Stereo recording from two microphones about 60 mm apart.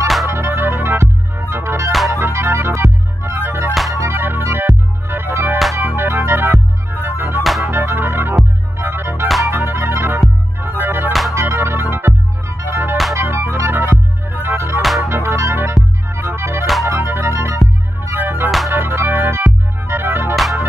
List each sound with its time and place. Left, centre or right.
0.3 s music: right
7.4 s music: centre
7.7 s music: right
14.8 s music: centre
15.0 s music: right
16.8 s music: right